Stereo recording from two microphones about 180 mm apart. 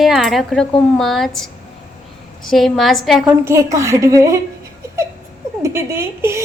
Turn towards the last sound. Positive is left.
turn(degrees=-15)  # may be behind; listen again after turning